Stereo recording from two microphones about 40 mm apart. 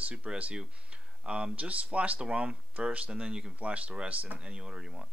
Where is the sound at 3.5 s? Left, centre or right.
Right; by 5.0 s centre.